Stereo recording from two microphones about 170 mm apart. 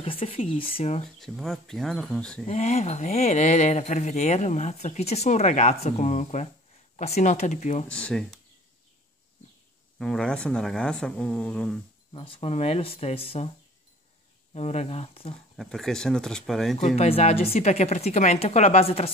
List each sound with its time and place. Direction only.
0.0 s speech: 35° left (ahead or behind)
1.0 s speech: centre (ahead or behind)
2.4 s speech: 40° left (ahead or behind)
7.9 s speech: 5° left (ahead or behind)
9.9 s speech: 5° left (ahead or behind)
12.1 s speech: 35° left (ahead or behind)
14.5 s speech: 40° left (ahead or behind)
15.5 s speech: centre (ahead or behind)
16.8 s speech: 40° left (ahead or behind)